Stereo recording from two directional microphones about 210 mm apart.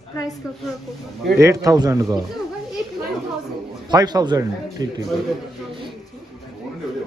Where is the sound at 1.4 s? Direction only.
15° right (ahead or behind).